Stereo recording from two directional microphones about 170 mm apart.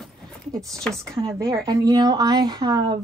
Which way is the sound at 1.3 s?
15° right (ahead or behind).